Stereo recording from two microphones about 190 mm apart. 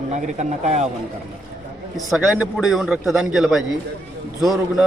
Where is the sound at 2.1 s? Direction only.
Centre (ahead or behind).